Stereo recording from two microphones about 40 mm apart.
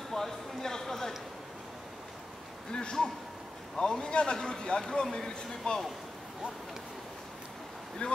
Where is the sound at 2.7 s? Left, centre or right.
Centre.